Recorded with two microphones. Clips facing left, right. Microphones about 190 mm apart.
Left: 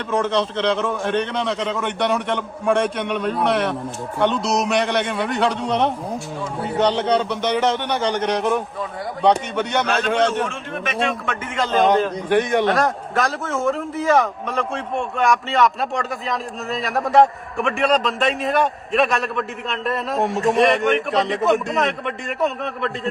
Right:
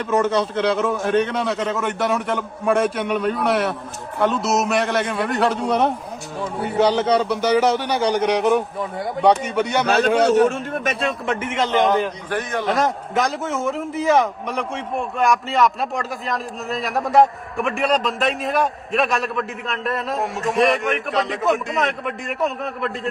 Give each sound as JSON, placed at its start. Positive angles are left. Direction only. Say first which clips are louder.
{"t": 0.1, "sound": "a man's voice", "louder": "right 1 dB", "side_deg": -5}
{"t": 10.4, "sound": "a man's voice", "louder": "right 7 dB", "side_deg": -40}
{"t": 11.4, "sound": "a man's voice", "louder": "left 1 dB", "side_deg": -20}
{"t": 12.4, "sound": "a man's voice", "louder": "left 7 dB", "side_deg": 20}
{"t": 12.6, "sound": "a man's voice", "louder": "left 1 dB", "side_deg": -20}
{"t": 14.9, "sound": "a man's voice", "louder": "even", "side_deg": 0}